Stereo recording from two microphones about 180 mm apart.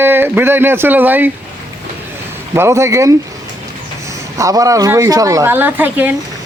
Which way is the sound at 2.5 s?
15° right (ahead or behind).